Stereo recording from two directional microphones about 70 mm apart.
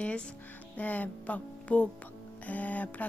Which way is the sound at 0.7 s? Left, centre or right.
Left.